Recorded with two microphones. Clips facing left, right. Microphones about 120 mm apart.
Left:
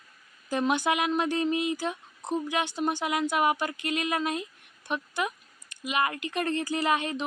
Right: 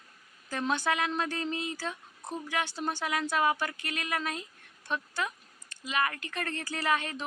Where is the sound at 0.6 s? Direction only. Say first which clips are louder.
Left 3 dB; 15° left (ahead or behind).